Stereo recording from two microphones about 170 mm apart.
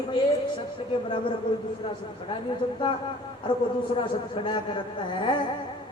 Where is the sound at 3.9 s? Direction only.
30° left (ahead or behind).